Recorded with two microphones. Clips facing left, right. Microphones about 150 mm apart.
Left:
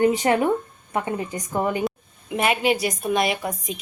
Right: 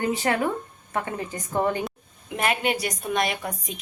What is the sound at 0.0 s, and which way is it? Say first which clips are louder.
A woman's voice: left 5 dB; 20° left (ahead or behind).